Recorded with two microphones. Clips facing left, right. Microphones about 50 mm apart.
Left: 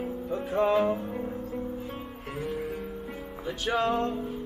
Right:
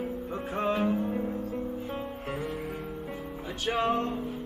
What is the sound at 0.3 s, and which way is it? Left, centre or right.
Music, right.